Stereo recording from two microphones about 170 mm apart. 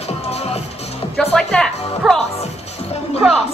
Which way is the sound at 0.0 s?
40° left (ahead or behind).